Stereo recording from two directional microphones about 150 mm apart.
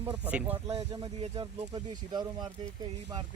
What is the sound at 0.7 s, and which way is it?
Speech, 40° right (ahead or behind).